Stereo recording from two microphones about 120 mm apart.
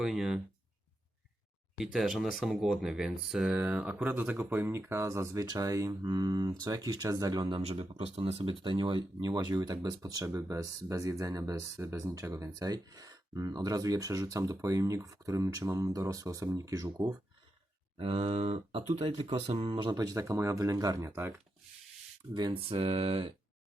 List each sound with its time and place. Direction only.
0.0 s speech: 5° right (ahead or behind)
1.8 s speech: 5° right (ahead or behind); by 7.6 s 35° right (ahead or behind)
7.6 s speech: 60° right (ahead or behind)
8.6 s speech: 40° right (ahead or behind)
17.9 s speech: 55° right (ahead or behind)
19.5 s speech: 45° right (ahead or behind); by 21.4 s 20° right (ahead or behind)
22.7 s a sound: 55° right (ahead or behind)